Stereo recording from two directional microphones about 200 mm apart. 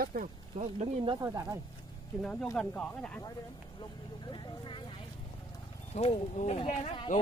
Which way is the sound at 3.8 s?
25° left (ahead or behind).